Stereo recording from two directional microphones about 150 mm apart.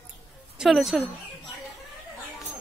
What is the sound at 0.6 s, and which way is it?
Speech, centre (ahead or behind).